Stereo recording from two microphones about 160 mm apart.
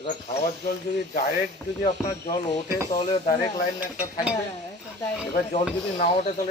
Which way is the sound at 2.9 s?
35° left (ahead or behind).